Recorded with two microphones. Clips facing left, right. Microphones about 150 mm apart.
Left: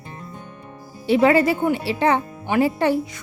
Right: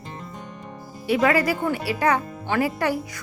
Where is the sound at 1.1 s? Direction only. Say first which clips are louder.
Left 4 dB; 25° left (ahead or behind).